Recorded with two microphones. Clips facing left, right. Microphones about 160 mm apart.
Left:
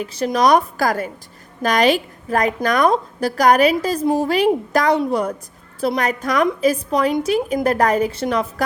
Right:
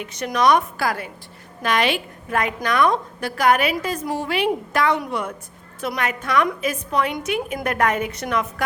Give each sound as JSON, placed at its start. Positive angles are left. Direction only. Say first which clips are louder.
{"t": 0.0, "sound": "a woman's voice", "louder": "left 3 dB", "side_deg": 30}